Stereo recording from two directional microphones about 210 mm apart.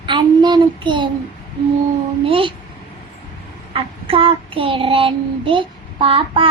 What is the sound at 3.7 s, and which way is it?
Child singing, 25° right (ahead or behind).